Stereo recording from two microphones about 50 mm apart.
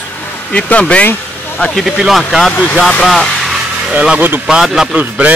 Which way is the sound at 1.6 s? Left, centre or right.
Centre.